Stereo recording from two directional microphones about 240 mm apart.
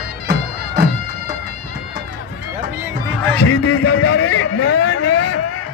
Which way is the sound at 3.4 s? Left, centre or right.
Left.